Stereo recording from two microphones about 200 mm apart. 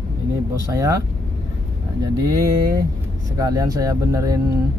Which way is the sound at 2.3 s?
15° right (ahead or behind).